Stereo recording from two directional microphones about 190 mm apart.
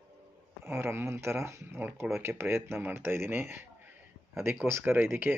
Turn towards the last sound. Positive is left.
turn(degrees=-10)  # may be behind; listen again after turning